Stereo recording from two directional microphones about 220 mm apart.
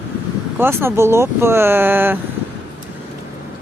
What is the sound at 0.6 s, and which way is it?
Speech, 10° right (ahead or behind).